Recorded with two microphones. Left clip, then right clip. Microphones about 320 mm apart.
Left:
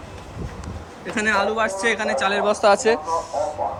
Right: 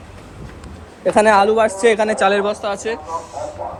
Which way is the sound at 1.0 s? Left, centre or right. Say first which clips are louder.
Right 9 dB; centre.